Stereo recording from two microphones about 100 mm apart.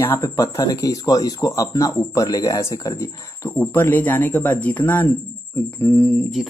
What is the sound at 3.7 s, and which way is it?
Speech, 20° left (ahead or behind).